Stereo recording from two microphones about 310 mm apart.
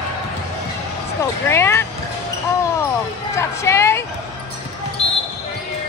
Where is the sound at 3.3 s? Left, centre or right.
Centre.